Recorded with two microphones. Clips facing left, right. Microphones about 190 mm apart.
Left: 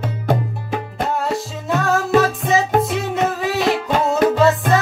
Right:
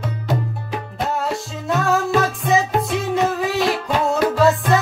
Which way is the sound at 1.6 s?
Centre (ahead or behind).